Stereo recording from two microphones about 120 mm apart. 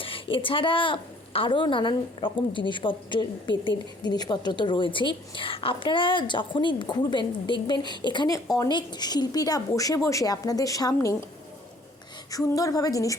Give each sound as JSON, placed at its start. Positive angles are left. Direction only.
{"t": 0.0, "sound": "a woman's voice", "side_deg": 45}
{"t": 12.3, "sound": "a woman's voice", "side_deg": 30}